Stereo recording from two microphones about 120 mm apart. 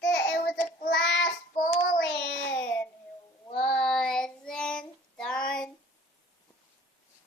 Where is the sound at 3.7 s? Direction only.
5° left (ahead or behind).